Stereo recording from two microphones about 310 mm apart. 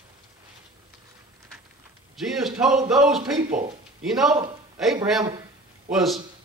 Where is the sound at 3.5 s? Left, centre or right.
Right.